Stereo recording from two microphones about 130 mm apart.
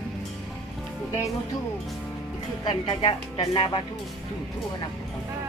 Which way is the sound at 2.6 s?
40° left (ahead or behind).